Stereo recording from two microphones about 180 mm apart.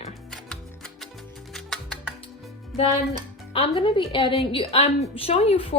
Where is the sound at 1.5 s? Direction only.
Centre (ahead or behind).